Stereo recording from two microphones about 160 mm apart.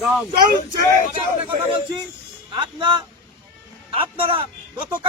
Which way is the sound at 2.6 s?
30° right (ahead or behind).